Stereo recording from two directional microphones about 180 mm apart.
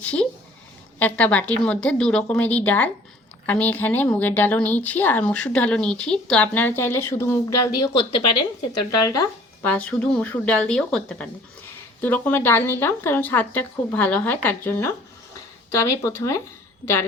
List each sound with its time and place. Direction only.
0.0 s speech: 5° left (ahead or behind)
9.0 s speech: 20° left (ahead or behind)